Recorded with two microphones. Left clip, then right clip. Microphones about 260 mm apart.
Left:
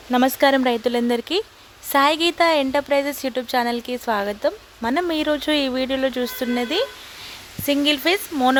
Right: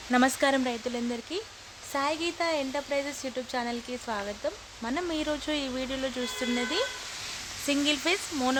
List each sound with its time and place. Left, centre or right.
0.1 s speech: centre